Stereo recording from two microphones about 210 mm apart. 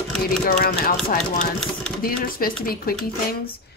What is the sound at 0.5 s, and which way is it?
Speech, 50° left (ahead or behind).